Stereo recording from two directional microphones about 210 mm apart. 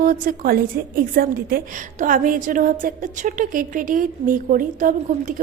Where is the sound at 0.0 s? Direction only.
40° right (ahead or behind).